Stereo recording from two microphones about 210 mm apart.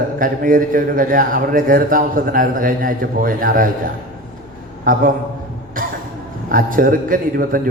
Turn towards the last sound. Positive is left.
turn(degrees=-40)  # may be behind; listen again after turning